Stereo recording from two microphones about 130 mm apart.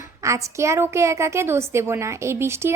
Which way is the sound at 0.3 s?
20° right (ahead or behind).